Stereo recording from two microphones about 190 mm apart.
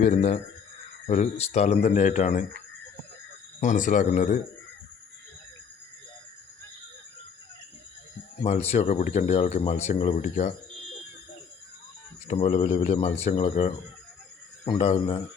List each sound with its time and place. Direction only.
0.0 s speech: 35° left (ahead or behind)
3.6 s speech: 40° left (ahead or behind)
8.4 s speech: 35° left (ahead or behind)
12.3 s speech: 35° left (ahead or behind)